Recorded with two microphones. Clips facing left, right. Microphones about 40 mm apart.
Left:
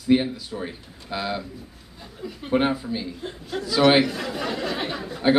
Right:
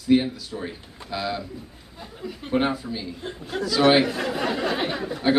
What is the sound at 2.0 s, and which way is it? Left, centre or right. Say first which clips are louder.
Chuckle: right 1 dB; centre.